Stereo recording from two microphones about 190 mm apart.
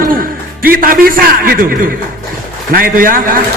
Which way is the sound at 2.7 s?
50° right (ahead or behind).